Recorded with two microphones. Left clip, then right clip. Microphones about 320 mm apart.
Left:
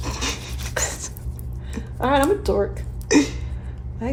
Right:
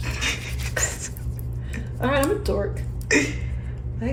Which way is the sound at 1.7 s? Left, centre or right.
Left.